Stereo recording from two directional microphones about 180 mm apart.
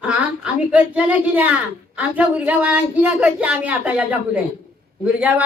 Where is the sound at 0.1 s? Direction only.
5° right (ahead or behind).